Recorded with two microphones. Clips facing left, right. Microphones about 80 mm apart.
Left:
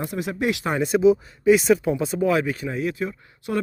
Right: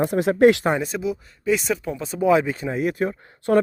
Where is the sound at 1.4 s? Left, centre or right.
Centre.